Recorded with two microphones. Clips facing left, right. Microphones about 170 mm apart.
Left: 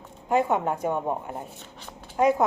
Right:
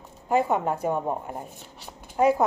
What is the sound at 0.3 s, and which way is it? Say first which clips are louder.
A woman's voice: even; 10° right (ahead or behind).